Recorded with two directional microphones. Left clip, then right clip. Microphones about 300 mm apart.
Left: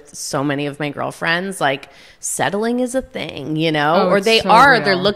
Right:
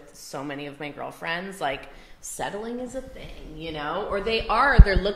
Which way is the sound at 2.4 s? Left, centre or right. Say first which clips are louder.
Left 13 dB; left.